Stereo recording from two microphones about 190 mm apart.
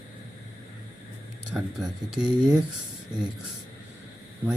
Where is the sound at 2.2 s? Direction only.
25° right (ahead or behind).